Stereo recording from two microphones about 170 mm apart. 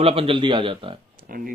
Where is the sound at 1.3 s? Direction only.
60° right (ahead or behind).